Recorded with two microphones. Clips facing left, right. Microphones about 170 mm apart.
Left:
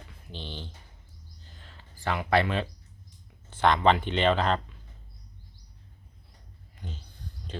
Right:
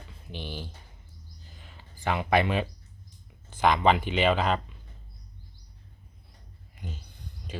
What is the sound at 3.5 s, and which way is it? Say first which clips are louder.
Speech: even; 10° right (ahead or behind).